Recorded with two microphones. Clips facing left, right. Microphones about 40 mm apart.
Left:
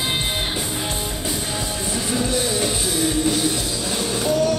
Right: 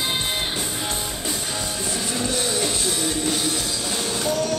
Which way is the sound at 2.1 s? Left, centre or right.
Centre.